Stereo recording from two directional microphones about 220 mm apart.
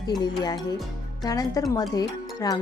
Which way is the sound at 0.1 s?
20° left (ahead or behind).